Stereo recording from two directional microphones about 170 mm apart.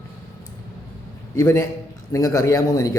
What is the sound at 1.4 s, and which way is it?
A man's voice, 15° left (ahead or behind).